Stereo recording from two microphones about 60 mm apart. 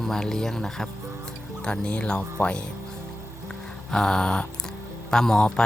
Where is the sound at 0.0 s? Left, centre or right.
Centre.